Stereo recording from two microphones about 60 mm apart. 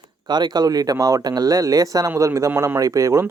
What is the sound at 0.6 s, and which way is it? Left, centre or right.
Speech, right.